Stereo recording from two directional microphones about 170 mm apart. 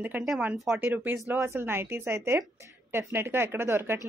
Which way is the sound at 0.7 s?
10° right (ahead or behind).